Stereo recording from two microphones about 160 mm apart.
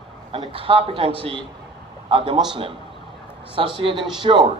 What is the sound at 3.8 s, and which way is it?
Speech, 35° right (ahead or behind).